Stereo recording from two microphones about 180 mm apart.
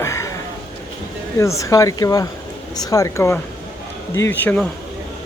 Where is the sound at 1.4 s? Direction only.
15° left (ahead or behind).